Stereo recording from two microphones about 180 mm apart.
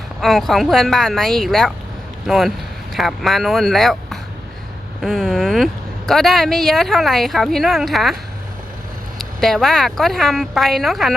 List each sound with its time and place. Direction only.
0.2 s speech: centre (ahead or behind)
9.1 s speech: centre (ahead or behind)